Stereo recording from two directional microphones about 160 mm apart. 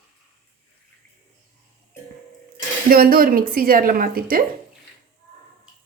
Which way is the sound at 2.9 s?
65° right (ahead or behind).